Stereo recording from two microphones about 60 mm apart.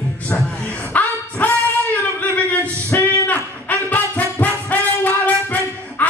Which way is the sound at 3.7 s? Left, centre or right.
Left.